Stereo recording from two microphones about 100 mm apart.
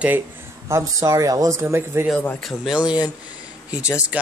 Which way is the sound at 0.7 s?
30° right (ahead or behind).